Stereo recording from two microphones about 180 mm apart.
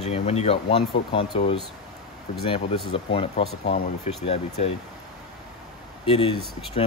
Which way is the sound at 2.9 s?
30° left (ahead or behind).